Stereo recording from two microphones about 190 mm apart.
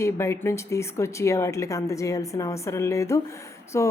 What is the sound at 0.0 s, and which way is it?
A woman's voice, 15° left (ahead or behind).